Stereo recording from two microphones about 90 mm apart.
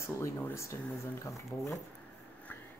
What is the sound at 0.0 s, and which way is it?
Speech, 30° left (ahead or behind).